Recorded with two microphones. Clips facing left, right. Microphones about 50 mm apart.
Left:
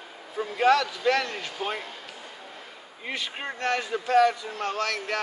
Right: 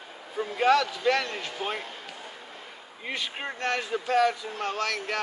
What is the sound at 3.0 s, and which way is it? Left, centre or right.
A man's voice, centre.